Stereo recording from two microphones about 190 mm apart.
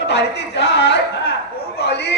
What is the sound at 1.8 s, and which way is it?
Speech, 60° left (ahead or behind).